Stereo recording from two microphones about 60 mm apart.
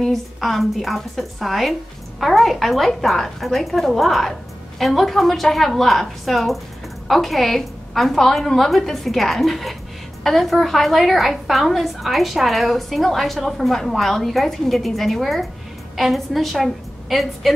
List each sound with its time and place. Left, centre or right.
0.0 s a woman's voice: centre